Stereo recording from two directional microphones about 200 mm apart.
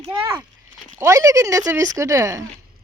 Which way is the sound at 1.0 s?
15° right (ahead or behind).